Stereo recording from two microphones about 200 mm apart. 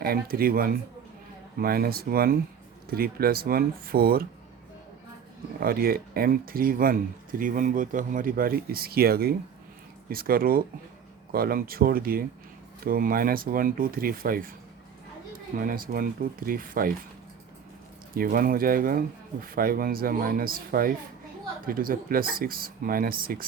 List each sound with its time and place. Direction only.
0.0 s speech: 50° right (ahead or behind)
5.5 s speech: 50° right (ahead or behind)
15.5 s speech: 45° right (ahead or behind)
18.1 s speech: 45° right (ahead or behind)